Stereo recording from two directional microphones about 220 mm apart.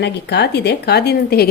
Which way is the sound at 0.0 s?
50° left (ahead or behind).